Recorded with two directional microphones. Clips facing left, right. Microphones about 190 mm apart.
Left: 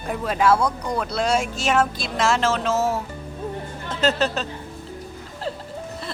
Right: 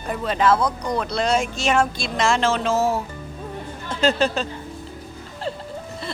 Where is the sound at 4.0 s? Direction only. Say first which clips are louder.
Right 2 dB; 5° left (ahead or behind).